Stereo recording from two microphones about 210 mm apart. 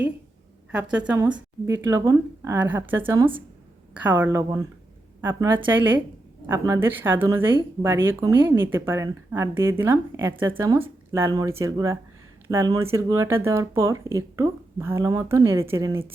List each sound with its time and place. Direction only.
0.7 s a woman's voice: 5° right (ahead or behind)
3.1 s speech: 20° right (ahead or behind)
3.9 s speech: 10° right (ahead or behind)